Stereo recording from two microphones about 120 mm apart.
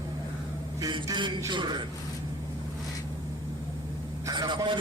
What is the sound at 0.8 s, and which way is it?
A man's voice, 35° right (ahead or behind).